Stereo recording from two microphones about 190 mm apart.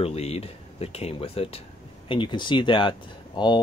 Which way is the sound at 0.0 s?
35° left (ahead or behind).